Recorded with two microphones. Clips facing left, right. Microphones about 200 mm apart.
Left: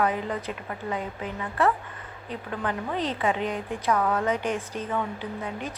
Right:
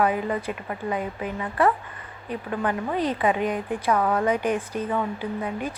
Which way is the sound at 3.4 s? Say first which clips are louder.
Right 4 dB; 50° right (ahead or behind).